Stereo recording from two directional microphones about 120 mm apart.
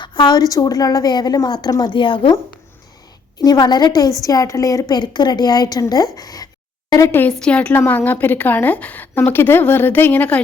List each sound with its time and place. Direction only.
0.0 s a woman's voice: 40° left (ahead or behind)
3.3 s a woman's voice: 35° left (ahead or behind)
7.1 s a woman's voice: 15° left (ahead or behind)